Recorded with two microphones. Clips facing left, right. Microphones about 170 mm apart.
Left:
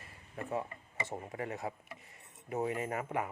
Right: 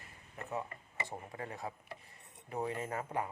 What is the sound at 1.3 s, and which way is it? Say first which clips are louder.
Speech: left 4 dB; 25° left (ahead or behind).